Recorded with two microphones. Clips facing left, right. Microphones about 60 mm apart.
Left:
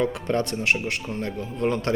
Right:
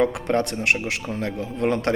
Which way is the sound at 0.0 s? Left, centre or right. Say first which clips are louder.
Right 3 dB; right.